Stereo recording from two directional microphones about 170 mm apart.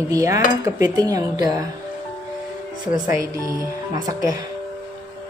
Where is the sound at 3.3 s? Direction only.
20° right (ahead or behind).